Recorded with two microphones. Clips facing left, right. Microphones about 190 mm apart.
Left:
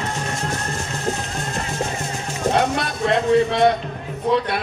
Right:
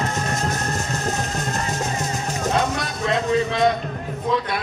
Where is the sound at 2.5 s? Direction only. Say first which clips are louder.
Left 4 dB; 60° left (ahead or behind).